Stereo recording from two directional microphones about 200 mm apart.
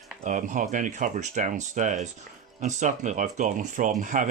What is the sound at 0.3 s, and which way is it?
Speech, 40° right (ahead or behind).